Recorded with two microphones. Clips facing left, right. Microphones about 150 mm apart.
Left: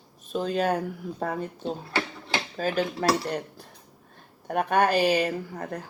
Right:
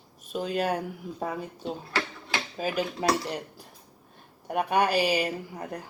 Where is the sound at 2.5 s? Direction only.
10° right (ahead or behind).